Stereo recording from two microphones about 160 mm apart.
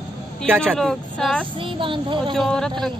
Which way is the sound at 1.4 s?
30° right (ahead or behind).